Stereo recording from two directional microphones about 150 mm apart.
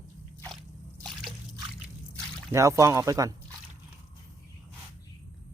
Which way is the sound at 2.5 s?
20° right (ahead or behind).